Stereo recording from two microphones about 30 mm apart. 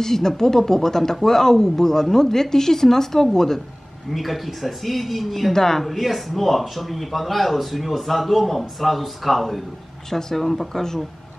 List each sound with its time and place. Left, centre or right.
0.0 s speech: centre
4.1 s a man's voice: centre
5.5 s speech: centre
5.9 s a man's voice: centre